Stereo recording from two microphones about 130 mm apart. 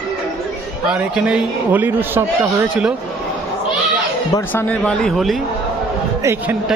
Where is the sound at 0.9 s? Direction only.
5° right (ahead or behind).